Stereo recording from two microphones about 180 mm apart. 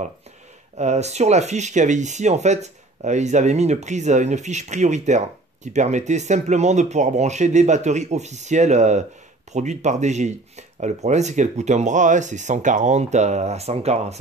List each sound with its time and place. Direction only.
0.7 s speech: 40° right (ahead or behind)